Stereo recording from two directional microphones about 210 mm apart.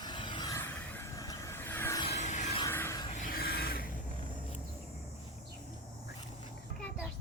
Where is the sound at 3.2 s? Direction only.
45° left (ahead or behind).